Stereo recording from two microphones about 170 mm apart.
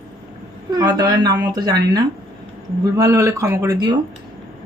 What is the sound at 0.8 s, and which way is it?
Speech, 25° right (ahead or behind).